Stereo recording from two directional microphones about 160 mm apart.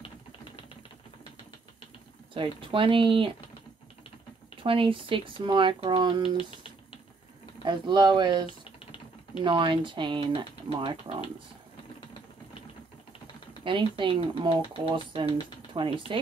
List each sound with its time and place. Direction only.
2.7 s speech: 30° right (ahead or behind)
4.6 s speech: 35° right (ahead or behind)
7.6 s speech: 30° right (ahead or behind)
13.7 s speech: 30° right (ahead or behind)